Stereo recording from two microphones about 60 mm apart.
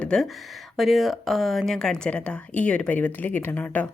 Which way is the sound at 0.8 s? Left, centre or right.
Centre.